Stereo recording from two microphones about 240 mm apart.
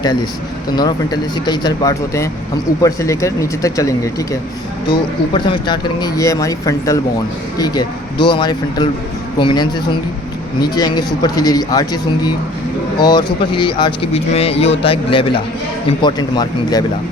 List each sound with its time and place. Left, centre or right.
0.8 s speech: centre